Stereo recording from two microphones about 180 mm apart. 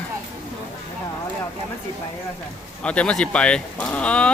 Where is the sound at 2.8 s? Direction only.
5° left (ahead or behind).